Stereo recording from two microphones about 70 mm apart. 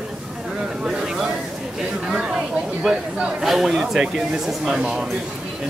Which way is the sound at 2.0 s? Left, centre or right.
Centre.